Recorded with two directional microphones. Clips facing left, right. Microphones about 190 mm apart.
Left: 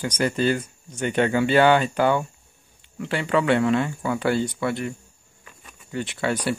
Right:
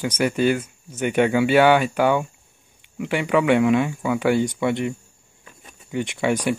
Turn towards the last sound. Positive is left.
turn(degrees=-15)  # may be behind; listen again after turning